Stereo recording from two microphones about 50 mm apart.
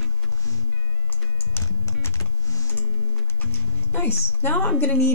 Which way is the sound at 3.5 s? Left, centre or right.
Left.